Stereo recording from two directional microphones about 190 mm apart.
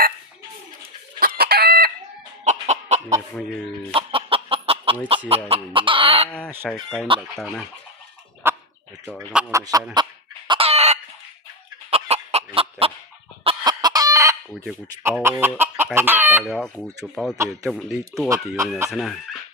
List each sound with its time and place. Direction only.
1.2 s chicken: 55° right (ahead or behind)
2.4 s chicken: 35° right (ahead or behind)
6.7 s speech: centre (ahead or behind)
8.4 s bird: 10° right (ahead or behind)
9.0 s speech: 5° right (ahead or behind)
9.5 s chicken: 15° right (ahead or behind)
11.9 s fowl: 30° right (ahead or behind)
13.4 s chicken: 25° right (ahead or behind); by 16.4 s 10° right (ahead or behind)
16.4 s speech: centre (ahead or behind)
17.3 s chicken: 15° right (ahead or behind)
17.7 s speech: centre (ahead or behind)
18.3 s chicken: 15° right (ahead or behind)
18.9 s speech: centre (ahead or behind)